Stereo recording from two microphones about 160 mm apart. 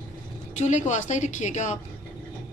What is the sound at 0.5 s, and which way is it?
A man's voice, 50° left (ahead or behind).